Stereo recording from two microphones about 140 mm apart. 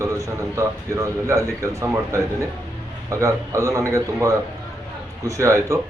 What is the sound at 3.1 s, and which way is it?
A man's voice, 20° right (ahead or behind).